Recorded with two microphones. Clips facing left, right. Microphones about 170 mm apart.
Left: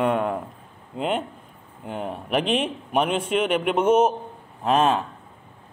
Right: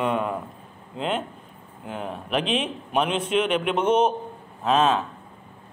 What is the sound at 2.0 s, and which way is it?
A man's voice, 10° left (ahead or behind).